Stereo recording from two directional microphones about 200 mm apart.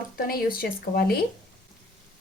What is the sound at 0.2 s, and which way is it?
Speech, 50° left (ahead or behind).